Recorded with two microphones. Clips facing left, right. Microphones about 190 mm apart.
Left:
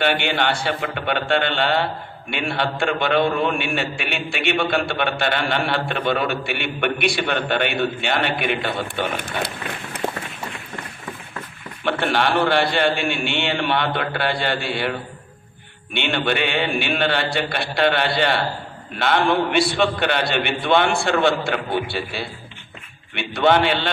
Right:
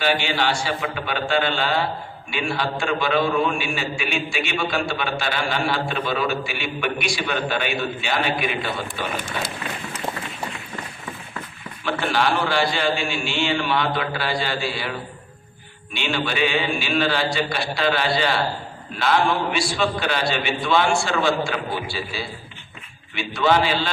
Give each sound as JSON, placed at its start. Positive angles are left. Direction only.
{"t": 0.0, "sound": "a man's voice", "side_deg": 60}
{"t": 10.0, "sound": "run", "side_deg": 65}
{"t": 11.9, "sound": "a man's voice", "side_deg": 60}